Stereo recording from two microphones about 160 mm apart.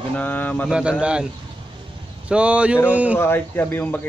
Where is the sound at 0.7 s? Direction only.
5° right (ahead or behind).